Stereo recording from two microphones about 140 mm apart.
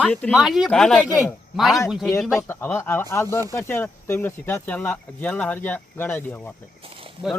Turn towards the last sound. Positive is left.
turn(degrees=-40)  # may be behind; listen again after turning